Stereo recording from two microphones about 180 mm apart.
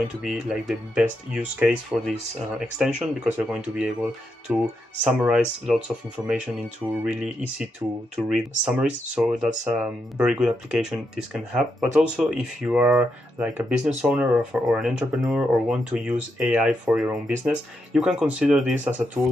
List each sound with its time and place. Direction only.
0.2 s speech: centre (ahead or behind)
19.2 s speech: 15° right (ahead or behind)